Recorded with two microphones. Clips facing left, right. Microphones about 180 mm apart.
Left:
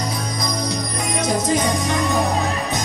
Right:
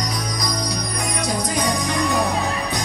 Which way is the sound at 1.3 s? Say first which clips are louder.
Left 4 dB; 25° left (ahead or behind).